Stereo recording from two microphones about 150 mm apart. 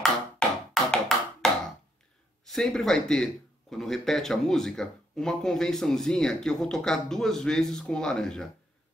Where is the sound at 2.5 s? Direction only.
5° left (ahead or behind).